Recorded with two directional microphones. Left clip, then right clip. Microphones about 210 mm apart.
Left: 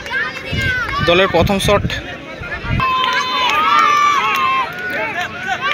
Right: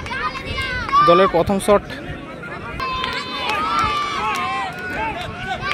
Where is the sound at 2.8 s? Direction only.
25° left (ahead or behind).